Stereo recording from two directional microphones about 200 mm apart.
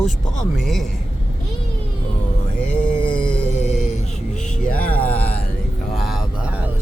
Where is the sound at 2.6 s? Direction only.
40° left (ahead or behind).